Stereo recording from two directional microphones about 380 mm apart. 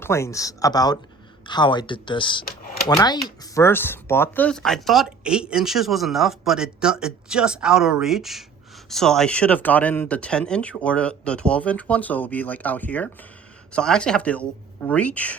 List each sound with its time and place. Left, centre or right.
0.0 s speech: centre
2.4 s speech: left
2.9 s speech: centre